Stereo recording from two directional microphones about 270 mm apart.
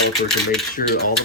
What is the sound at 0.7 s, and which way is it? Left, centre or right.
Speech, left.